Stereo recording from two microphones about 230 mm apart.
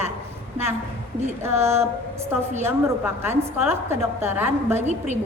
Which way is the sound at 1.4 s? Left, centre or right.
Centre.